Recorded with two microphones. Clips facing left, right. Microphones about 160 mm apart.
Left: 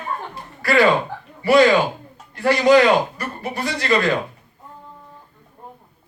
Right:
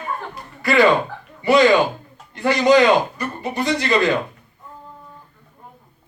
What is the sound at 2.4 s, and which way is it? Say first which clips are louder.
A man's voice: even; 20° right (ahead or behind).